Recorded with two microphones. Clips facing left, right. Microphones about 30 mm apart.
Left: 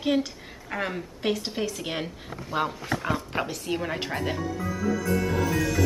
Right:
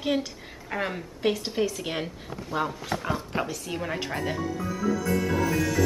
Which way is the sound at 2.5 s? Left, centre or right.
Centre.